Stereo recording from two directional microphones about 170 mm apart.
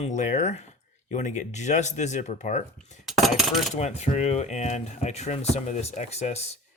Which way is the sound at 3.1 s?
Centre (ahead or behind).